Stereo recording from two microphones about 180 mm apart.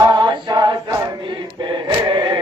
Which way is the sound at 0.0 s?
25° right (ahead or behind).